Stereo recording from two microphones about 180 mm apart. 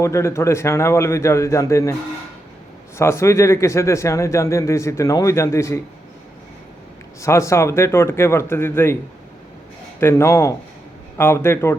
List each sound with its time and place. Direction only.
0.0 s speech: 15° left (ahead or behind)
3.0 s speech: 15° left (ahead or behind)
7.2 s speech: 15° left (ahead or behind)
10.0 s speech: 15° left (ahead or behind)